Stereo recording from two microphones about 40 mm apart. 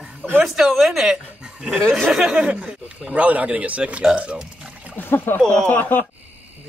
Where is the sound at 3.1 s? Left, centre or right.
Right.